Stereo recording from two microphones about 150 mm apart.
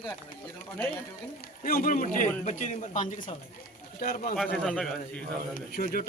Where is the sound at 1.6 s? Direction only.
65° left (ahead or behind).